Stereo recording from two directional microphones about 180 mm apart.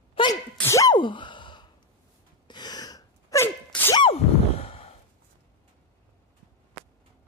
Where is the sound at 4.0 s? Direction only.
35° left (ahead or behind).